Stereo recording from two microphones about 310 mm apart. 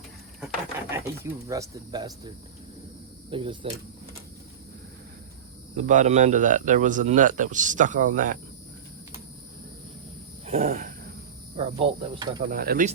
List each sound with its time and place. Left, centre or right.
0.9 s speech: centre
5.7 s speech: right
10.4 s a sound: right
11.5 s speech: centre
12.5 s speech: right